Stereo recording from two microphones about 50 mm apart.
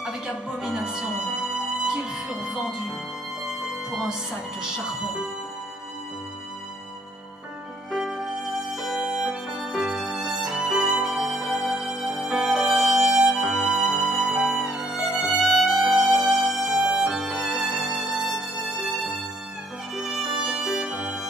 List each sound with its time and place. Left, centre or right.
0.7 s music: centre
3.9 s speech: centre
7.9 s music: centre